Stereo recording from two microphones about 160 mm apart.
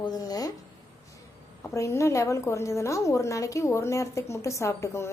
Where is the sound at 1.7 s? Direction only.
20° left (ahead or behind).